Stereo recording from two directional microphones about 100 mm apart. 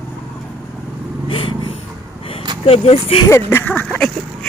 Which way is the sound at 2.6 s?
80° left.